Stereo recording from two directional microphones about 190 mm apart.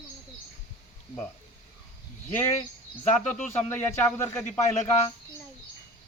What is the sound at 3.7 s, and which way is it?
Speech, 10° left (ahead or behind).